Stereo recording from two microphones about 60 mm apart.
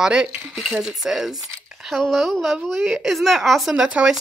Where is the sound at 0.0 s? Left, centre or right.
Centre.